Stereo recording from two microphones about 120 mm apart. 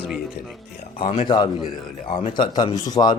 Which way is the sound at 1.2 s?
40° left (ahead or behind).